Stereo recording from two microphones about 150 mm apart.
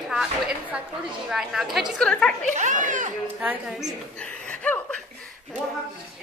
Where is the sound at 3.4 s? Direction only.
10° right (ahead or behind).